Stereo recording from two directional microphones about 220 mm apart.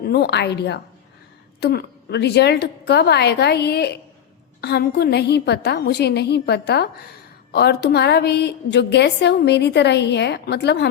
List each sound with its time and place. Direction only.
0.0 s a woman's voice: 45° left (ahead or behind)